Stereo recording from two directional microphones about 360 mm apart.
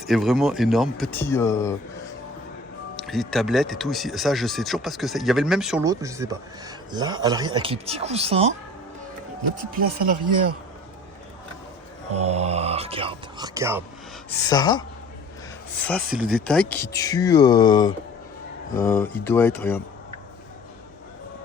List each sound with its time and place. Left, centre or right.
0.1 s speech: centre
2.9 s speech: centre
12.1 s speech: centre
14.4 s speech: centre